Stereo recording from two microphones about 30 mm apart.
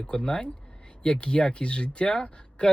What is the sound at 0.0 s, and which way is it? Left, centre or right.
Speech, left.